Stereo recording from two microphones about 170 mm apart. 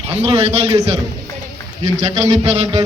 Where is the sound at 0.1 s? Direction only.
35° right (ahead or behind).